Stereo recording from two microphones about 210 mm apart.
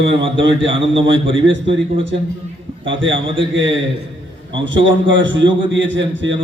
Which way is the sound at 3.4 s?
60° right (ahead or behind).